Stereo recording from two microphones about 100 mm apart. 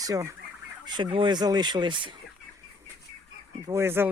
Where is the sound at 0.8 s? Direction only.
45° right (ahead or behind).